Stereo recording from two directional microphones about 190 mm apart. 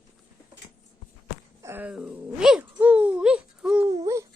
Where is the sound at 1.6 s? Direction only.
10° right (ahead or behind).